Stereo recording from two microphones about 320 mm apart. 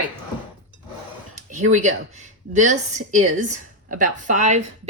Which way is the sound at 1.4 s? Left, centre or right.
Right.